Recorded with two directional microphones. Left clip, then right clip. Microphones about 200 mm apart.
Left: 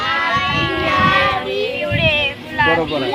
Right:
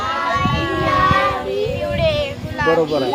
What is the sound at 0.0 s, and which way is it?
Child singing, 15° left (ahead or behind).